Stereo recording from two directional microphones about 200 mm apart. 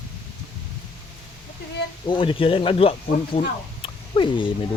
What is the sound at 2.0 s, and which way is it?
Speech, 25° left (ahead or behind).